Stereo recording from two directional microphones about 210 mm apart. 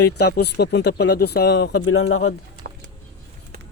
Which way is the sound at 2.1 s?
90° left.